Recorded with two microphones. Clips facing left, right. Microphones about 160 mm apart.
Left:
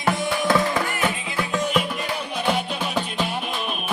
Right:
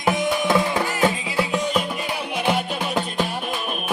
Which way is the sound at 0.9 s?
25° right (ahead or behind).